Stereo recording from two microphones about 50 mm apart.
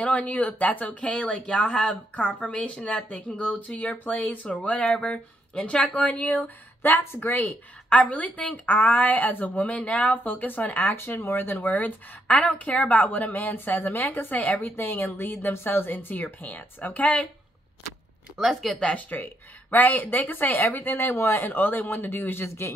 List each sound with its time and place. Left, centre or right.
0.0 s speech: left
6.8 s a woman's voice: left
7.2 s a woman's voice: left
11.7 s a woman's voice: left
14.6 s a woman's voice: left
18.5 s speech: centre
18.8 s speech: centre
19.7 s a woman's voice: left